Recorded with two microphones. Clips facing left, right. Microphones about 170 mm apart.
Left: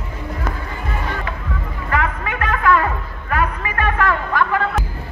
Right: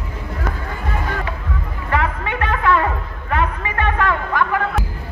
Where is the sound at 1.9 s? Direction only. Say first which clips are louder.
Right 1 dB; 30° right (ahead or behind).